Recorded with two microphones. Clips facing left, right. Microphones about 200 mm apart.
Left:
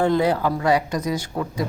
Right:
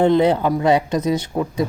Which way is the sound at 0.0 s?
20° right (ahead or behind).